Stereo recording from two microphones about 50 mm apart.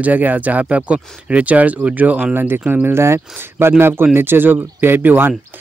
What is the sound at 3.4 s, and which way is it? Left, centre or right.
Speech, right.